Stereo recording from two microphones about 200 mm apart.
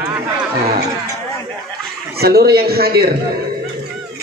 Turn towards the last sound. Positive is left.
turn(degrees=-50)  # may be behind; listen again after turning